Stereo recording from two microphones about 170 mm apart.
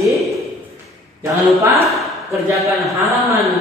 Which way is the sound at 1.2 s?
15° right (ahead or behind).